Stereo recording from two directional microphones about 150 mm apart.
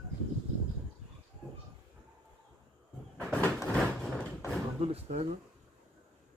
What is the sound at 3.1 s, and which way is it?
Sliding door, 10° left (ahead or behind).